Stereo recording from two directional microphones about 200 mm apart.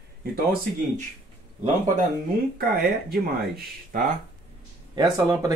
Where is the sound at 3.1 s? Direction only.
50° right (ahead or behind).